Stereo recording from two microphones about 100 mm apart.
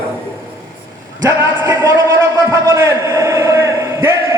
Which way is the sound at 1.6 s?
25° right (ahead or behind).